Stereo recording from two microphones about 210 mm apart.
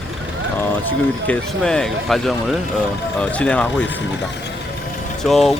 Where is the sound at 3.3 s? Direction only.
5° left (ahead or behind).